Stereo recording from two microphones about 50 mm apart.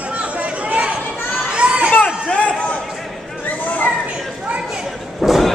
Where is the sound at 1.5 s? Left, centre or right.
Right.